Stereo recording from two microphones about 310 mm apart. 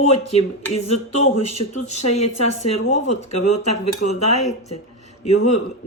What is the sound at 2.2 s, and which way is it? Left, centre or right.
Speech, left.